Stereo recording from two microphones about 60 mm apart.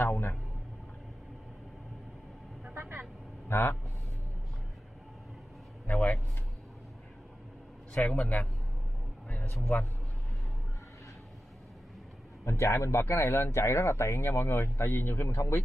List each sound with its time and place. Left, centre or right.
2.7 s vehicle: right
3.4 s speech: left
5.9 s a sound: left
7.9 s a man's voice: centre
9.7 s a man's voice: left
12.4 s speech: left